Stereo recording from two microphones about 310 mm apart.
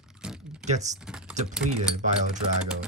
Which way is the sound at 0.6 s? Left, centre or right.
Right.